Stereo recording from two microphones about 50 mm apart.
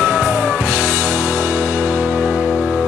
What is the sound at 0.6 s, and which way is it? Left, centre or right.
Music, right.